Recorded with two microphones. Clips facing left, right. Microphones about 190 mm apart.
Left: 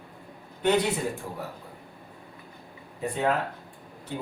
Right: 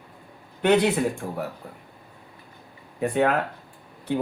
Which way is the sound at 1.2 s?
65° right (ahead or behind).